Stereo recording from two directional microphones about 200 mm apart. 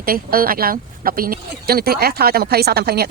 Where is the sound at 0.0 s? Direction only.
45° right (ahead or behind).